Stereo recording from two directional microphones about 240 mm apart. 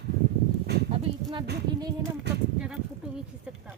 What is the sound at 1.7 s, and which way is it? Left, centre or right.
Music, centre.